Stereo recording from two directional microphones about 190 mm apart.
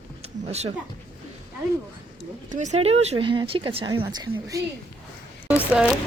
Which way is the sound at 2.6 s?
35° right (ahead or behind).